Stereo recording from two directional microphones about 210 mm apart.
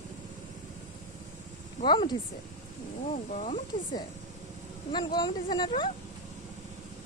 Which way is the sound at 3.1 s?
35° left (ahead or behind).